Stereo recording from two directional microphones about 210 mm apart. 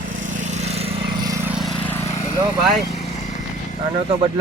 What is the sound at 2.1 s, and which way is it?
Vehicle, 30° left (ahead or behind).